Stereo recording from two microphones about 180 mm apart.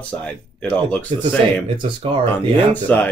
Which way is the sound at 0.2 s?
5° left (ahead or behind).